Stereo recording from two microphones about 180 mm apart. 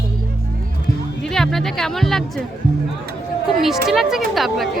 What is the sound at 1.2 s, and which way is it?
Speech, 5° left (ahead or behind).